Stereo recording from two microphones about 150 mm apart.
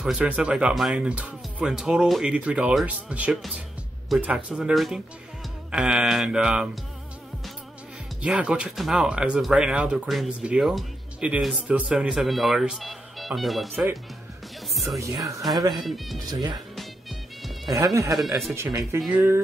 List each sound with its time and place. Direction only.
0.0 s speech: 5° right (ahead or behind)
8.2 s speech: 10° right (ahead or behind)
15.5 s speech: 25° right (ahead or behind)
15.8 s speech: centre (ahead or behind)
16.3 s speech: 25° right (ahead or behind)
16.7 s music: centre (ahead or behind)
17.7 s speech: 20° right (ahead or behind)
18.1 s speech: centre (ahead or behind)
18.5 s speech: 20° right (ahead or behind)